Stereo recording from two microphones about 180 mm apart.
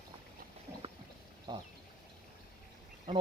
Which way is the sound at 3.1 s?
30° right (ahead or behind).